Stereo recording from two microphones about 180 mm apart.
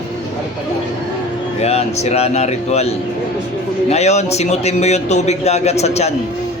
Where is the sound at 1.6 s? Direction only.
35° left (ahead or behind).